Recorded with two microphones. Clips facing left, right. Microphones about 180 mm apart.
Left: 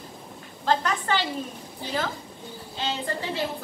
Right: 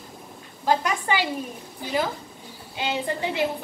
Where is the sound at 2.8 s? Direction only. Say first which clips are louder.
Right 3 dB; 15° right (ahead or behind).